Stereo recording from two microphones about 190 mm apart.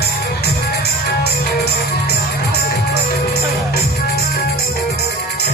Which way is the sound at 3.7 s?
55° left (ahead or behind).